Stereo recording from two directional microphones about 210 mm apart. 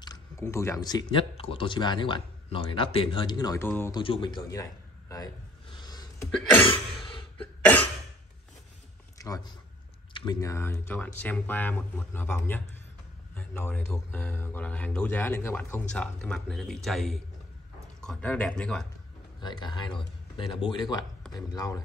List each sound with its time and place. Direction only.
0.0 s speech: 15° left (ahead or behind)
4.0 s speech: 25° left (ahead or behind)
5.1 s throat clearing: 20° left (ahead or behind)
7.3 s cough: 5° left (ahead or behind)
10.1 s speech: 15° left (ahead or behind)
19.4 s speech: 20° left (ahead or behind)